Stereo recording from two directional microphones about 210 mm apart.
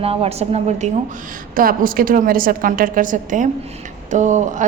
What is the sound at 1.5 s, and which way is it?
A woman's voice, 40° right (ahead or behind).